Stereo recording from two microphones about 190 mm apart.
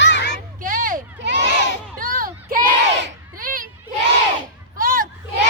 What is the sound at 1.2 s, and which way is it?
Crowd, 65° right (ahead or behind).